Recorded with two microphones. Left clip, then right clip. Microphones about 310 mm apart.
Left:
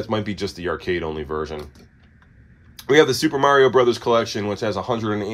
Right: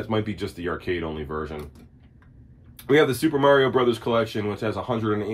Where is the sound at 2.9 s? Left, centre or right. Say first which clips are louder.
Left 4 dB; left.